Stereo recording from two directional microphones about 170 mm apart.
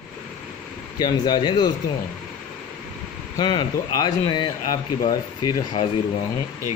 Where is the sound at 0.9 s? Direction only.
25° left (ahead or behind).